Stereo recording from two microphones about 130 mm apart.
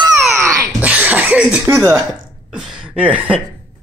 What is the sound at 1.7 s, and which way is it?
Speech, 20° right (ahead or behind).